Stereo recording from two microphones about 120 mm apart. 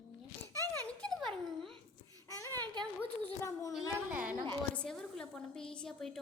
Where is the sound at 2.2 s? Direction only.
30° left (ahead or behind).